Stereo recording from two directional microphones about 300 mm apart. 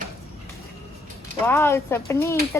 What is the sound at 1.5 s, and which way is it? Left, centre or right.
Speech, centre.